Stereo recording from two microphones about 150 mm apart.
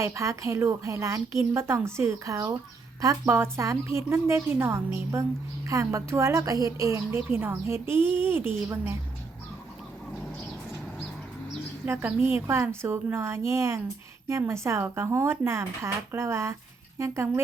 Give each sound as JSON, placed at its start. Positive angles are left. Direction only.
{"t": 0.0, "sound": "a woman's voice", "side_deg": -20}
{"t": 11.9, "sound": "a woman's voice", "side_deg": -15}